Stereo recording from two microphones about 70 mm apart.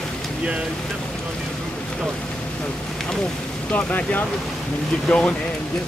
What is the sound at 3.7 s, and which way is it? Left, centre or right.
Speech, left.